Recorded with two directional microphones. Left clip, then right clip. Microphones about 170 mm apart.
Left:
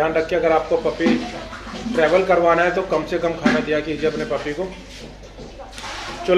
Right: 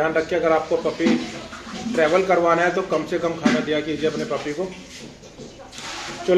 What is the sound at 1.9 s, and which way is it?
Speech, 10° right (ahead or behind).